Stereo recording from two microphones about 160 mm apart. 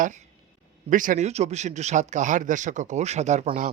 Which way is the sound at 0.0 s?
50° right (ahead or behind).